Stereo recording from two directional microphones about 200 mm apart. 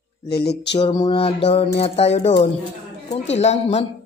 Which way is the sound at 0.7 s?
25° left (ahead or behind).